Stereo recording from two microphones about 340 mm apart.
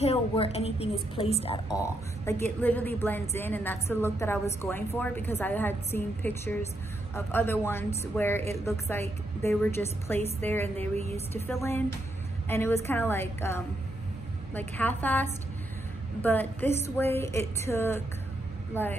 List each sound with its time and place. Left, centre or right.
0.0 s a woman's voice: centre